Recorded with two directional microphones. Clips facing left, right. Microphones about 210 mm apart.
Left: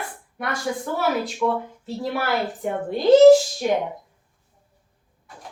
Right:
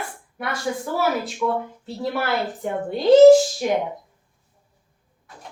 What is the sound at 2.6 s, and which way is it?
Speech, centre (ahead or behind).